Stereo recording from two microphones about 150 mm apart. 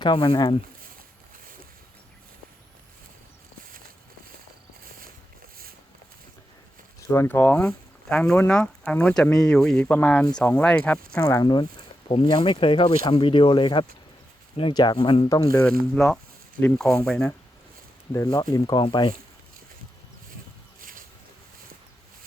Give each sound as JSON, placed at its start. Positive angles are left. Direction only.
{"t": 0.0, "sound": "speech", "side_deg": 30}
{"t": 7.1, "sound": "speech", "side_deg": 15}
{"t": 11.3, "sound": "speech", "side_deg": 25}
{"t": 16.6, "sound": "speech", "side_deg": 5}
{"t": 18.1, "sound": "speech", "side_deg": 20}